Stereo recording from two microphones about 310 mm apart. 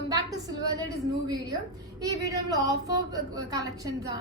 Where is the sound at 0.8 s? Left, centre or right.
Centre.